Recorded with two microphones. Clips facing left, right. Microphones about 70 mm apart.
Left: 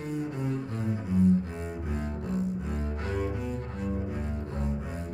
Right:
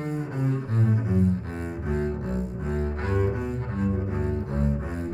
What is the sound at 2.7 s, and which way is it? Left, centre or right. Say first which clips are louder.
Double bass: right 5 dB; right.